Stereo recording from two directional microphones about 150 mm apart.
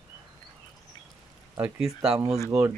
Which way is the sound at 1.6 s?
5° right (ahead or behind).